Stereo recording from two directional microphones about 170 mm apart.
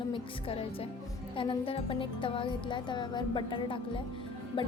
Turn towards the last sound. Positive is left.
turn(degrees=30)  # may be behind; listen again after turning